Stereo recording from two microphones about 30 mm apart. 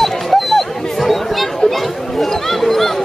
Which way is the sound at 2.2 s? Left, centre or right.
Centre.